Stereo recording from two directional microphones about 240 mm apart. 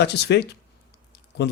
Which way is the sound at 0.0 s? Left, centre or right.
Left.